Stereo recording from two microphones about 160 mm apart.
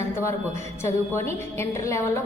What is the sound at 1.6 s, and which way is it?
Speech, 20° left (ahead or behind).